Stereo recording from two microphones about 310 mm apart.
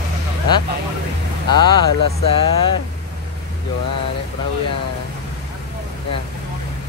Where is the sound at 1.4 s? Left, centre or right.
Centre.